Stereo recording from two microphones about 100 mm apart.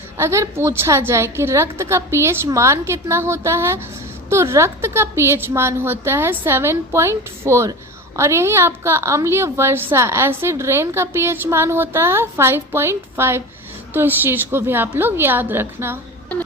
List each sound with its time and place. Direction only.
0.2 s a woman's voice: 30° right (ahead or behind)